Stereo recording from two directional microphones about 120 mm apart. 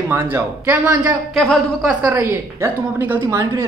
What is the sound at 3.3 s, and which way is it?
Speech, 30° right (ahead or behind).